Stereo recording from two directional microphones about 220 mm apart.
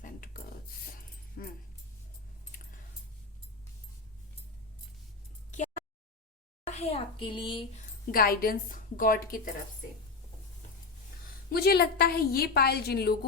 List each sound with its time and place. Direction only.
0.0 s a sound: 40° left (ahead or behind)
1.4 s dog: 45° left (ahead or behind)
6.7 s a child's voice: 30° left (ahead or behind)
8.1 s a woman's voice: 40° left (ahead or behind)
11.4 s a woman's voice: 45° left (ahead or behind)